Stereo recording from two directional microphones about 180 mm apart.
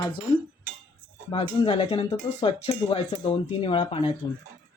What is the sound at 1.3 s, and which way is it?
Speech, 30° left (ahead or behind).